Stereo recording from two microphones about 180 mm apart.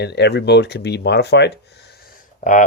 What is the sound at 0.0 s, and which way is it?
Speech, 70° left (ahead or behind).